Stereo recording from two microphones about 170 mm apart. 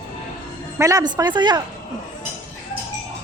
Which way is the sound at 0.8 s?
20° right (ahead or behind).